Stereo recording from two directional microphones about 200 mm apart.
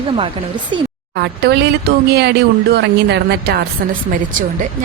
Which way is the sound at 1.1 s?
55° right (ahead or behind).